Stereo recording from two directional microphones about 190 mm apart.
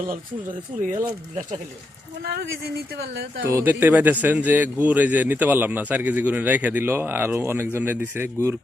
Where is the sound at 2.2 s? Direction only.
55° right (ahead or behind).